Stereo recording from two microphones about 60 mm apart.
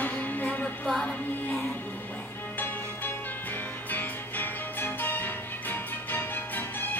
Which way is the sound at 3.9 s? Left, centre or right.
Left.